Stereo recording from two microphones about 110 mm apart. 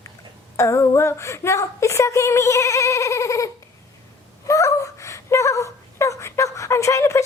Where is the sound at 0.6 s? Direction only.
25° left (ahead or behind).